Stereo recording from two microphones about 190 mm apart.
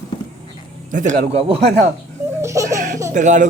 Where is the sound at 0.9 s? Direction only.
40° right (ahead or behind).